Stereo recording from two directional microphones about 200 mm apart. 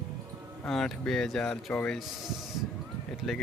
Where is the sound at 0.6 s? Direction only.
5° left (ahead or behind).